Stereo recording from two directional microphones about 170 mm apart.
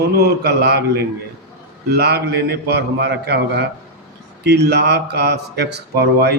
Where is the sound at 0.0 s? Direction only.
70° right (ahead or behind).